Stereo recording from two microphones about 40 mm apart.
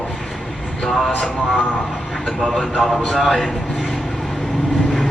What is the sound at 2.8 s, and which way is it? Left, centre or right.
A man's voice, centre.